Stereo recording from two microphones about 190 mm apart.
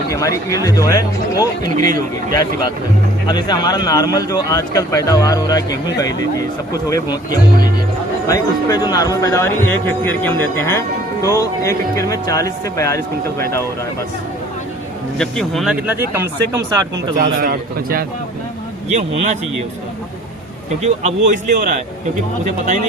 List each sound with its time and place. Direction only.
0.1 s a man's voice: 15° left (ahead or behind)
8.3 s a man's voice: 20° left (ahead or behind)
15.2 s speech: centre (ahead or behind)
17.2 s a man's voice: 50° right (ahead or behind)
18.9 s speech: 40° right (ahead or behind)
20.8 s speech: 35° right (ahead or behind)
22.4 s speech: 40° right (ahead or behind)